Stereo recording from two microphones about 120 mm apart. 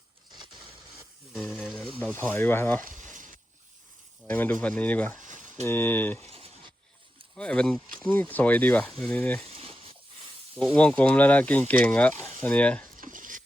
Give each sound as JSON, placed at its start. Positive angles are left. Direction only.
{"t": 1.3, "sound": "speech", "side_deg": 5}
{"t": 2.0, "sound": "speech", "side_deg": 10}
{"t": 2.9, "sound": "a sound", "side_deg": -90}
{"t": 4.3, "sound": "speech", "side_deg": 15}
{"t": 6.3, "sound": "a sound", "side_deg": -55}
{"t": 7.3, "sound": "speech", "side_deg": 10}
{"t": 9.5, "sound": "a sound", "side_deg": -50}
{"t": 10.5, "sound": "speech", "side_deg": 10}
{"t": 13.1, "sound": "dishes", "side_deg": -90}